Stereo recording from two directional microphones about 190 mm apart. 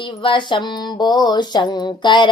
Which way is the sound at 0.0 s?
25° left (ahead or behind).